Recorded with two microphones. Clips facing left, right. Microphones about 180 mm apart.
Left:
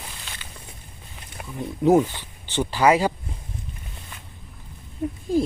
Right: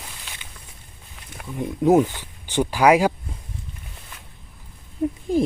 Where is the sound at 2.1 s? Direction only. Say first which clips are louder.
Right 3 dB; 10° right (ahead or behind).